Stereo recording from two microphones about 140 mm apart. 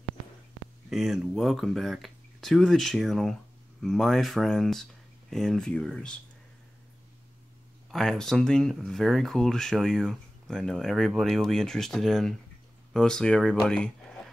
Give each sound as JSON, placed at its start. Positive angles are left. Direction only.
{"t": 0.8, "sound": "speech", "side_deg": -5}
{"t": 7.9, "sound": "speech", "side_deg": 5}